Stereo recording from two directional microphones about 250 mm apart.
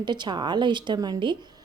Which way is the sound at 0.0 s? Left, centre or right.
Centre.